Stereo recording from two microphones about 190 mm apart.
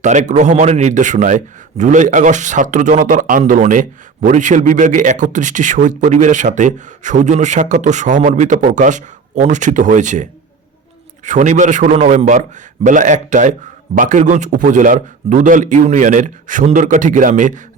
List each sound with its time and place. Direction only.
0.0 s speech: 40° right (ahead or behind)